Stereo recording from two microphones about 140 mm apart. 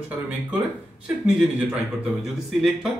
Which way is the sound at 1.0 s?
10° right (ahead or behind).